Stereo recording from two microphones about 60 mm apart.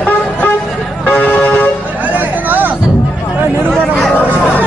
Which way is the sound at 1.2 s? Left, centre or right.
Left.